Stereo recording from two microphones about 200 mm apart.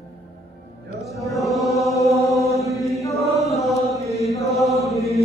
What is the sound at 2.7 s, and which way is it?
Chant, centre (ahead or behind).